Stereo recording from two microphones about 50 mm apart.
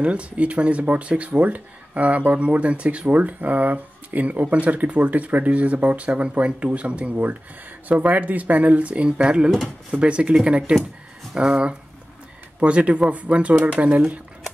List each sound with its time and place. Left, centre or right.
0.0 s speech: right
9.5 s speech: centre
9.9 s speech: right
11.3 s speech: centre